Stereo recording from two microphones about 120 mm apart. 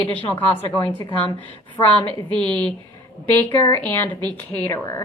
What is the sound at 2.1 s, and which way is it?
Speech, 45° right (ahead or behind).